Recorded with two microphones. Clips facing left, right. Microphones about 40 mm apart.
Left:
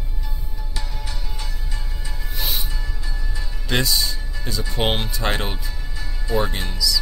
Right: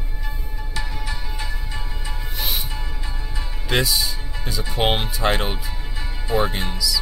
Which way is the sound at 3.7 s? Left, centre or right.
Centre.